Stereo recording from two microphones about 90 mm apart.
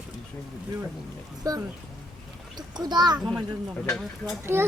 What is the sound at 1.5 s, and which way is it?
Speech, 40° right (ahead or behind).